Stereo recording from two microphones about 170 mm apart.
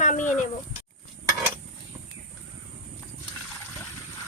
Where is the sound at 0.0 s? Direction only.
45° left (ahead or behind).